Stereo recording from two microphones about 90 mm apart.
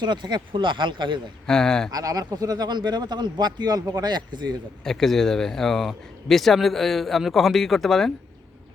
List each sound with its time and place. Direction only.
0.0 s speech: 55° right (ahead or behind)
1.5 s speech: 5° left (ahead or behind)
1.9 s speech: 40° right (ahead or behind)
4.8 s speech: 5° left (ahead or behind)